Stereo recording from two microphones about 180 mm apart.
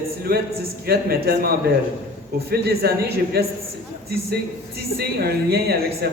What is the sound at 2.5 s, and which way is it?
Speech, 60° right (ahead or behind).